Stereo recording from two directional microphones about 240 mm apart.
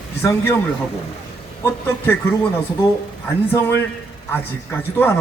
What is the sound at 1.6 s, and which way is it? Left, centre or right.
Speech, centre.